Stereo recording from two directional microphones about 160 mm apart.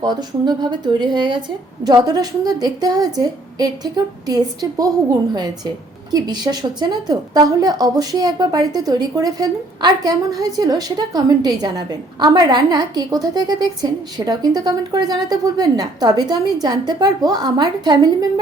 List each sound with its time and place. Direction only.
0.0 s a woman's voice: 25° right (ahead or behind)